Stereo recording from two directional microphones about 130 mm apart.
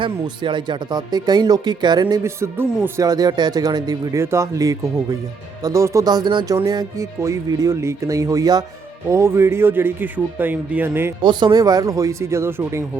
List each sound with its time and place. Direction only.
0.0 s speech: 40° right (ahead or behind); by 11.1 s 15° right (ahead or behind)
11.2 s speech: 35° right (ahead or behind); by 12.8 s 20° right (ahead or behind)